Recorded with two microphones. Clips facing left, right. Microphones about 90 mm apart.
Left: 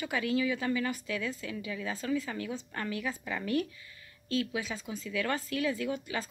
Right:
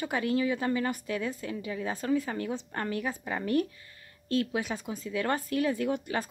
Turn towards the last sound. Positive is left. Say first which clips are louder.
# right 4 dB
turn(degrees=-50)  # may be behind; listen again after turning